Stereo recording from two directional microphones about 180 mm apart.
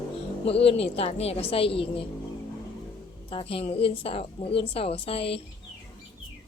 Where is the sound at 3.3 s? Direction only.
30° left (ahead or behind).